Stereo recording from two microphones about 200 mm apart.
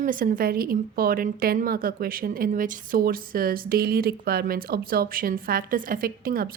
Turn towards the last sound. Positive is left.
turn(degrees=-45)  # may be behind; listen again after turning